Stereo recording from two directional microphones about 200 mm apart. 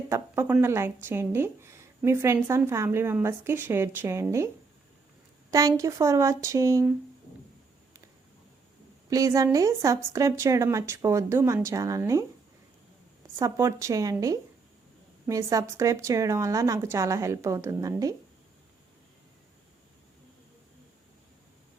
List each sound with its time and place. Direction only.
0.1 s speech: 10° right (ahead or behind)
5.5 s speech: 15° right (ahead or behind)
9.0 s speech: 15° right (ahead or behind)
13.3 s speech: 15° right (ahead or behind)